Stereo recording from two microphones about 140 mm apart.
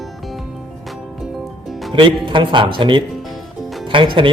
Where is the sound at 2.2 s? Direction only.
35° right (ahead or behind).